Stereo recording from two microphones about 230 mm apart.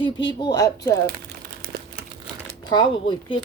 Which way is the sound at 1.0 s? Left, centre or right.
Right.